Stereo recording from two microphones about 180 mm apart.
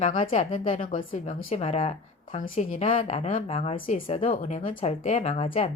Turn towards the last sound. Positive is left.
turn(degrees=35)  # may be behind; listen again after turning